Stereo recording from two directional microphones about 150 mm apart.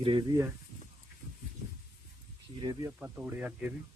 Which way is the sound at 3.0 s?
10° right (ahead or behind).